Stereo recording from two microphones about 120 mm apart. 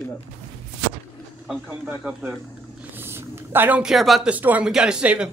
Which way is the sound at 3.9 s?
Centre (ahead or behind).